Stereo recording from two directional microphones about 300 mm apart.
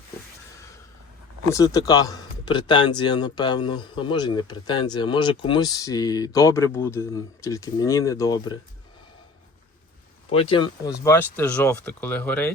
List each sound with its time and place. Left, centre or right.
1.5 s speech: centre
10.2 s speech: centre